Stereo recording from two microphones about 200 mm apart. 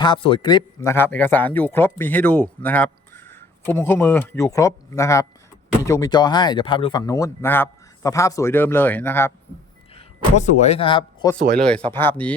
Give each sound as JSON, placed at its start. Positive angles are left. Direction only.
{"t": 0.0, "sound": "a man's voice", "side_deg": 25}
{"t": 0.8, "sound": "a man's voice", "side_deg": 10}
{"t": 9.9, "sound": "speech", "side_deg": 35}
{"t": 11.9, "sound": "a man's voice", "side_deg": 10}